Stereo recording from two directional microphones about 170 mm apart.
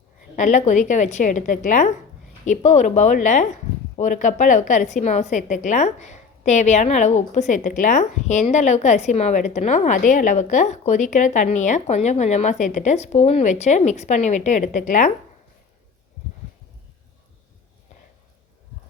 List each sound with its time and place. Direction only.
0.3 s a woman's voice: 45° left (ahead or behind)